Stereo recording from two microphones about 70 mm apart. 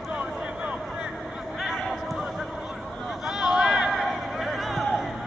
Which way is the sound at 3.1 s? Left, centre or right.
Centre.